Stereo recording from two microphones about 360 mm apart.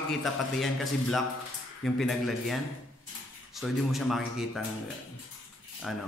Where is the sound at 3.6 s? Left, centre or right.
Centre.